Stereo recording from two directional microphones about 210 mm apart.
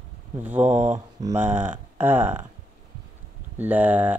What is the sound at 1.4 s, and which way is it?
Speech, 10° right (ahead or behind).